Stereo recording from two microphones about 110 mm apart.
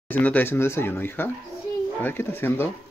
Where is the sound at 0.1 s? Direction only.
15° left (ahead or behind).